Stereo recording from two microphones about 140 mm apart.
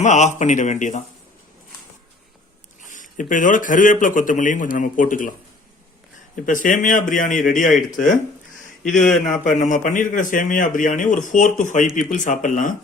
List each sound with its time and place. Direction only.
0.0 s speech: 55° left (ahead or behind)
2.8 s speech: 65° left (ahead or behind)
6.4 s speech: 70° left (ahead or behind)
8.8 s speech: 5° left (ahead or behind)
9.4 s speech: 65° left (ahead or behind)